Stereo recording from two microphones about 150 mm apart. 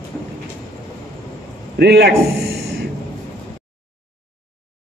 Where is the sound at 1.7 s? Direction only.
90° right.